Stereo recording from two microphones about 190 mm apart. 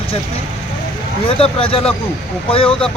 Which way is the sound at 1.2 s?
30° left (ahead or behind).